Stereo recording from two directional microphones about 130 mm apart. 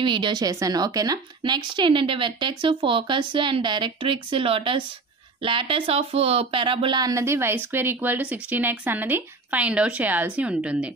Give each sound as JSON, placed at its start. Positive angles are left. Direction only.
{"t": 0.0, "sound": "a woman's voice", "side_deg": -40}